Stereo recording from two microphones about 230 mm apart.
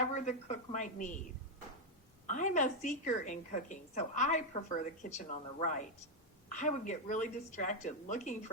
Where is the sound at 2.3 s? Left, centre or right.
Left.